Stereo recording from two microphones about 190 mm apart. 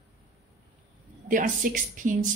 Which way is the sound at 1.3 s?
45° right (ahead or behind).